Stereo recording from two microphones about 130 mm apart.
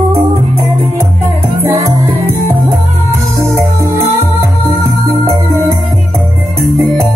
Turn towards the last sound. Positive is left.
turn(degrees=0)  # may be behind; listen again after turning